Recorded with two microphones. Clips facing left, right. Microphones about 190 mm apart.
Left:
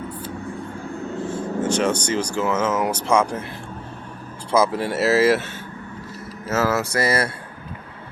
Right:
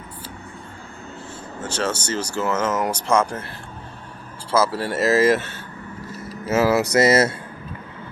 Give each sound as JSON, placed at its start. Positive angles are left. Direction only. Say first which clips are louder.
{"t": 1.8, "sound": "speech", "louder": "left 3 dB", "side_deg": 15}
{"t": 4.5, "sound": "speech", "louder": "left 1 dB", "side_deg": 15}
{"t": 6.5, "sound": "speech", "louder": "right 4 dB", "side_deg": -15}